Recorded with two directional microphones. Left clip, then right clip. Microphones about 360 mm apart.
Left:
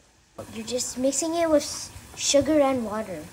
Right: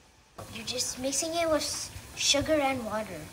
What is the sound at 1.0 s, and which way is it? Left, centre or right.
Speech, centre.